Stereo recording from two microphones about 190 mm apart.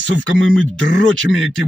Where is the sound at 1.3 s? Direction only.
Centre (ahead or behind).